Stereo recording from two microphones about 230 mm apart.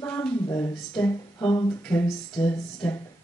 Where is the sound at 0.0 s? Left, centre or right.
Centre.